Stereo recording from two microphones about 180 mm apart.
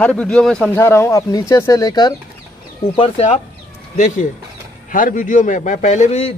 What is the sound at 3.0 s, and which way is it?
Speech, 35° left (ahead or behind).